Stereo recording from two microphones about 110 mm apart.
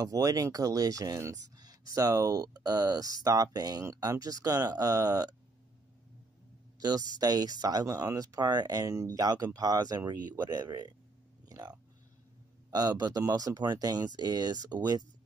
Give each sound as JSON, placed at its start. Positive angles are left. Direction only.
{"t": 0.0, "sound": "speech", "side_deg": -30}
{"t": 6.8, "sound": "speech", "side_deg": -35}
{"t": 11.4, "sound": "a sound", "side_deg": -35}
{"t": 12.7, "sound": "speech", "side_deg": -35}